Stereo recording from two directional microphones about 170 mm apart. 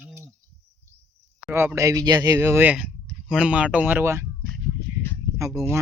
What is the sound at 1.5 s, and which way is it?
Speech, 15° right (ahead or behind).